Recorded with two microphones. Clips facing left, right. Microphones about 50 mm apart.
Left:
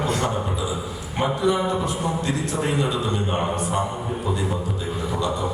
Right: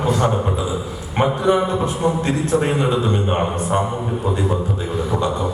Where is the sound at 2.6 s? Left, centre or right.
Right.